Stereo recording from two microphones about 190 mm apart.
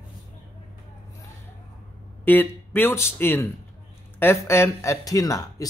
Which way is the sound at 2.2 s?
10° left (ahead or behind).